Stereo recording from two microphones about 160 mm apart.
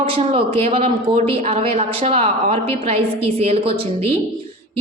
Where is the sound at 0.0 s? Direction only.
35° right (ahead or behind).